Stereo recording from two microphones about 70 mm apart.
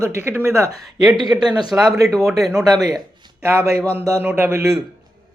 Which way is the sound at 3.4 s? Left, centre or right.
Right.